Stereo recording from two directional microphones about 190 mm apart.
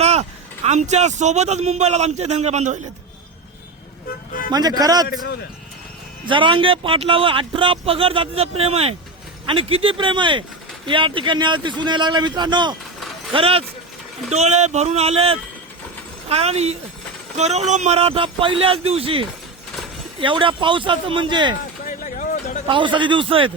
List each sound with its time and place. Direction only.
0.0 s speech: 35° right (ahead or behind)
4.5 s speech: 20° right (ahead or behind)
6.2 s speech: 25° right (ahead or behind)
21.8 s a sound: 40° left (ahead or behind)
22.6 s speech: 25° right (ahead or behind)